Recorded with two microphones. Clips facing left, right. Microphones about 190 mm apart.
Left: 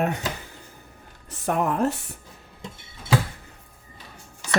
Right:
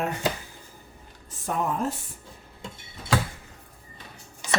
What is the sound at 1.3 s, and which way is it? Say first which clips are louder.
Speech: left 4 dB; 70° left (ahead or behind).